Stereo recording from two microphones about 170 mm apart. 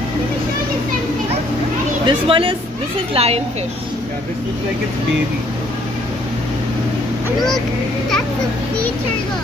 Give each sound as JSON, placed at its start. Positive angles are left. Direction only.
{"t": 2.0, "sound": "speech", "side_deg": -30}